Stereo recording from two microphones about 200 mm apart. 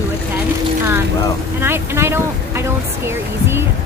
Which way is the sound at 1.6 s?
10° right (ahead or behind).